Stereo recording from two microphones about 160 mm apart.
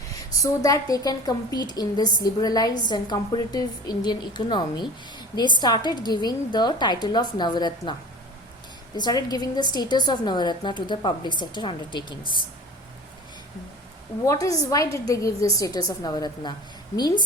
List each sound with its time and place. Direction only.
0.4 s a woman's voice: 20° left (ahead or behind)
9.0 s a woman's voice: 25° left (ahead or behind)
14.3 s a woman's voice: 20° left (ahead or behind)